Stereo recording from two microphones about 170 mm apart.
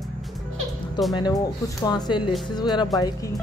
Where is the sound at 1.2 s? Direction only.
25° left (ahead or behind).